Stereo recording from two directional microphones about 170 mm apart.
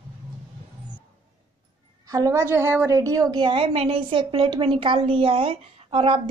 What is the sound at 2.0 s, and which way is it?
A woman's voice, 20° right (ahead or behind).